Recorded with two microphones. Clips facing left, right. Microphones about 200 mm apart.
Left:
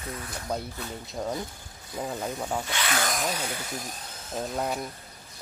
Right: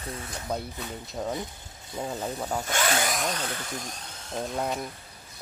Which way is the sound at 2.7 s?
45° right (ahead or behind).